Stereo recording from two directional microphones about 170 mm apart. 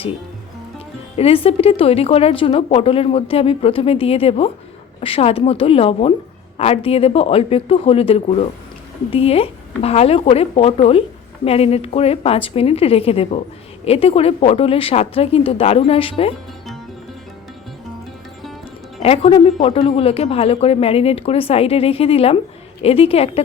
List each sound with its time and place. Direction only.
1.1 s speech: 35° left (ahead or behind)
19.0 s speech: 35° left (ahead or behind)